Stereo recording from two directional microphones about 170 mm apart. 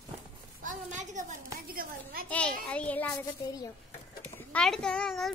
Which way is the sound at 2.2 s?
10° left (ahead or behind).